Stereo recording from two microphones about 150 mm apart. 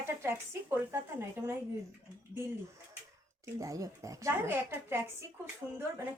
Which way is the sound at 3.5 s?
20° right (ahead or behind).